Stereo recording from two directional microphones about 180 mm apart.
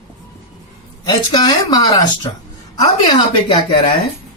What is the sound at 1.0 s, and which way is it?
Speech, 25° left (ahead or behind).